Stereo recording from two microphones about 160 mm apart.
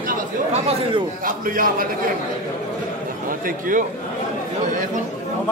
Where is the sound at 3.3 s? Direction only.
60° right (ahead or behind).